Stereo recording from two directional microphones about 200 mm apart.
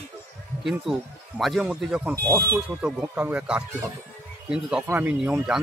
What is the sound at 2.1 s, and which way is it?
Speech, 15° right (ahead or behind).